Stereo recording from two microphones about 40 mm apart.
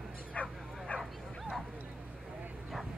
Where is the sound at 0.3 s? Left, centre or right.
Left.